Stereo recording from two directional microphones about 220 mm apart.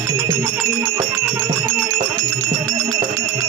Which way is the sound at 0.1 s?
15° right (ahead or behind).